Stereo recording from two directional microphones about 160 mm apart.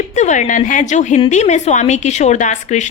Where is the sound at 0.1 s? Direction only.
50° left (ahead or behind).